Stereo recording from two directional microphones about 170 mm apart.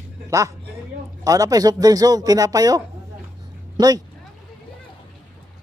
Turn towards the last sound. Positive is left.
turn(degrees=-20)  # may be behind; listen again after turning